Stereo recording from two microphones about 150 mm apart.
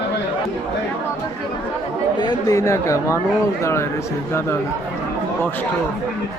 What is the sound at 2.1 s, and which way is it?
Speech, 25° left (ahead or behind).